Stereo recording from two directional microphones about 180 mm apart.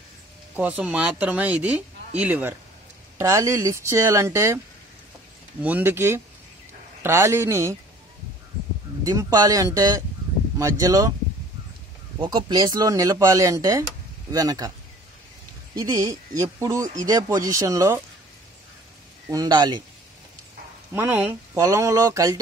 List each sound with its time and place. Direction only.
0.6 s speech: 10° right (ahead or behind)
5.6 s speech: 10° right (ahead or behind)
9.0 s speech: 20° right (ahead or behind)
12.2 s speech: 25° right (ahead or behind)
15.7 s speech: 20° right (ahead or behind)
19.2 s speech: 20° right (ahead or behind)
20.9 s speech: 10° right (ahead or behind)